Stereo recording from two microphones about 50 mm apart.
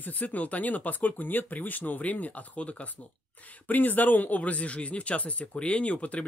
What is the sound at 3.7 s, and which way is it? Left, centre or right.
Speech, left.